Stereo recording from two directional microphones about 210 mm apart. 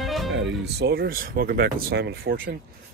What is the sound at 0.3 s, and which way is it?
Speech, 50° right (ahead or behind).